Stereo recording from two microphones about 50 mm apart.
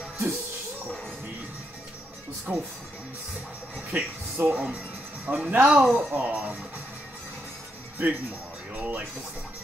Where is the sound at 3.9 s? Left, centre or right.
Right.